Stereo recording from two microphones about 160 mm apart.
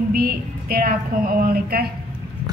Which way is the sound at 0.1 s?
70° right (ahead or behind).